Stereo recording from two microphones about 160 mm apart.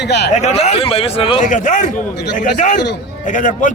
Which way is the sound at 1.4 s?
50° left (ahead or behind).